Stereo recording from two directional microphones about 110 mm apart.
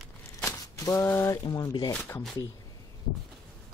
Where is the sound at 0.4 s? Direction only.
30° left (ahead or behind).